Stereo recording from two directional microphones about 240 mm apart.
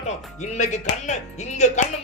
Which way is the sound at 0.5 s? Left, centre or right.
Left.